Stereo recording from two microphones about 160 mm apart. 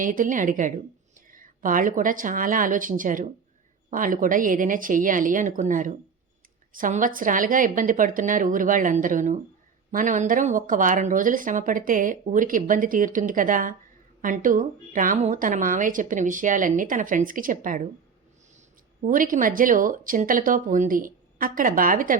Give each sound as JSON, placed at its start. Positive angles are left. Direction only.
{"t": 0.0, "sound": "speech", "side_deg": -55}
{"t": 19.0, "sound": "speech", "side_deg": -55}